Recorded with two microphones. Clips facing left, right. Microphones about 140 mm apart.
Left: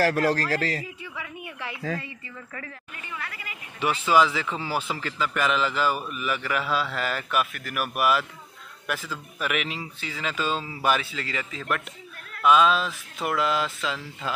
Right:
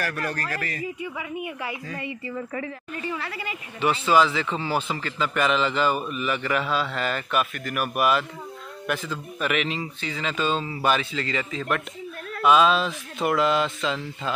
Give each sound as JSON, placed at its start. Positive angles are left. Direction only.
{"t": 0.0, "sound": "a man's voice", "side_deg": 90}
{"t": 1.0, "sound": "a woman's voice", "side_deg": -15}
{"t": 2.9, "sound": "a woman's voice", "side_deg": -35}
{"t": 3.8, "sound": "a man's voice", "side_deg": 10}